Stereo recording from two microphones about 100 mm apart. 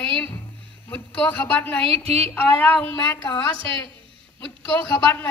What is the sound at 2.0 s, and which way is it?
Speech, 90° right.